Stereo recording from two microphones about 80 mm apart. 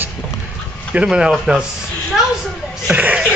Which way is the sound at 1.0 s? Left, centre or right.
Centre.